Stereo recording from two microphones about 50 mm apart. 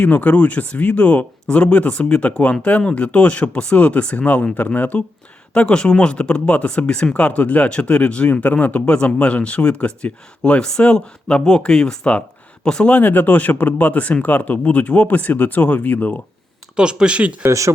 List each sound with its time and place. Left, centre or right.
0.0 s speech: left
5.5 s speech: centre
12.9 s speech: left
16.7 s speech: centre